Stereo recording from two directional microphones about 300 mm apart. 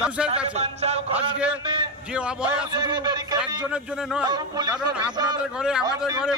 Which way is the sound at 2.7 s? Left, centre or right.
Centre.